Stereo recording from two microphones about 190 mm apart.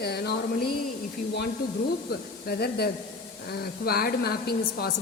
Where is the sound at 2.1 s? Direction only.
55° left (ahead or behind).